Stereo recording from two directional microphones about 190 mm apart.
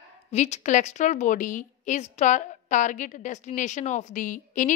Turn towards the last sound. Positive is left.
turn(degrees=45)  # may be behind; listen again after turning